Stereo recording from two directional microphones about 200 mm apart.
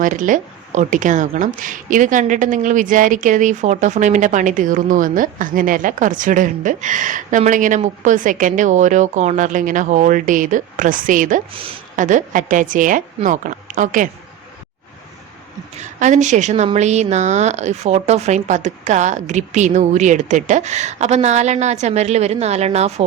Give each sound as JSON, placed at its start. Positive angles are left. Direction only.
{"t": 0.0, "sound": "a woman's voice", "side_deg": -40}
{"t": 15.8, "sound": "a woman's voice", "side_deg": -35}